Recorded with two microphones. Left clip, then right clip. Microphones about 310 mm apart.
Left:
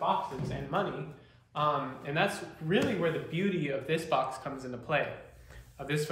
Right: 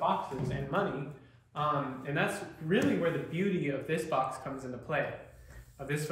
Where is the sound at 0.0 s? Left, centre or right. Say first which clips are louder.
Left 1 dB; centre.